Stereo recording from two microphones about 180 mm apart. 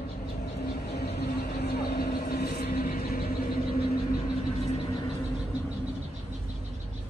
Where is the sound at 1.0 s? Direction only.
60° left (ahead or behind).